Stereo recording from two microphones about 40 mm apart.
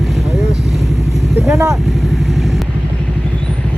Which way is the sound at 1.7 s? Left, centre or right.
Centre.